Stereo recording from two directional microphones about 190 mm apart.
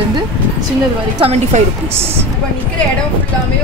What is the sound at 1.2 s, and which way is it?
Speech, 35° right (ahead or behind).